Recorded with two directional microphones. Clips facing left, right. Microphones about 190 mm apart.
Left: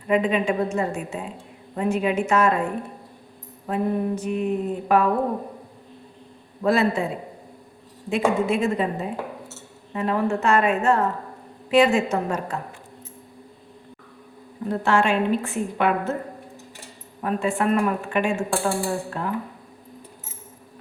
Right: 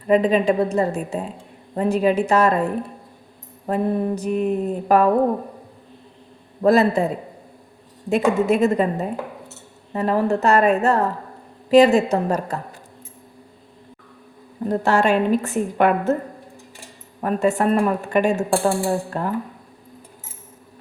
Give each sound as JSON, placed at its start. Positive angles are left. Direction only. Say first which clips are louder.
{"t": 0.1, "sound": "a woman's voice", "louder": "right 5 dB", "side_deg": -35}
{"t": 3.7, "sound": "a woman's voice", "louder": "right 3 dB", "side_deg": -40}
{"t": 6.6, "sound": "a woman's voice", "louder": "right 5 dB", "side_deg": -40}
{"t": 8.1, "sound": "a woman's voice", "louder": "right 4 dB", "side_deg": -40}
{"t": 14.7, "sound": "a woman's voice", "louder": "right 3 dB", "side_deg": -40}
{"t": 17.2, "sound": "a woman's voice", "louder": "right 4 dB", "side_deg": -45}